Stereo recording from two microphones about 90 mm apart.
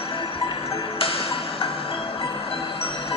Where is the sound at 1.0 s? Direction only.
90° left.